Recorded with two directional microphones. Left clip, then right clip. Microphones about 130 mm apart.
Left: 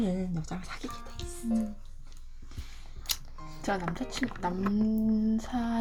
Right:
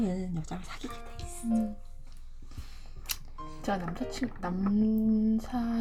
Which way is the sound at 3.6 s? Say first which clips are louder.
Left 1 dB; 15° right (ahead or behind).